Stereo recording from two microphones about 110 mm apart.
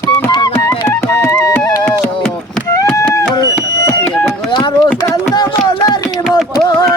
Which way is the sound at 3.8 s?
30° left (ahead or behind).